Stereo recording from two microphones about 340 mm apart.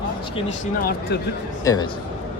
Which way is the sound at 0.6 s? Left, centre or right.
Left.